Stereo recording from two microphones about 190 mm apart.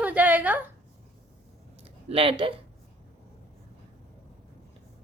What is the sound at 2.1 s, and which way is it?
Speech, 30° right (ahead or behind).